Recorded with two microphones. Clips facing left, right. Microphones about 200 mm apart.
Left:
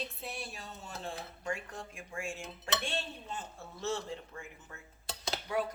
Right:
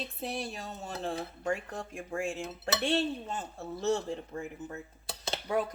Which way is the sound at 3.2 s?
40° right (ahead or behind).